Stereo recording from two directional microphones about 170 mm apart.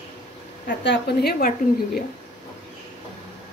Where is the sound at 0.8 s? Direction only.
80° left.